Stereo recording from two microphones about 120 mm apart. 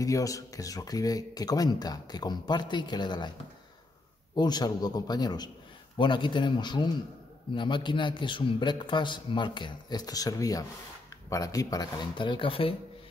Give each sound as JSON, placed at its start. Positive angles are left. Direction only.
{"t": 0.0, "sound": "speech", "side_deg": 30}
{"t": 4.4, "sound": "speech", "side_deg": 35}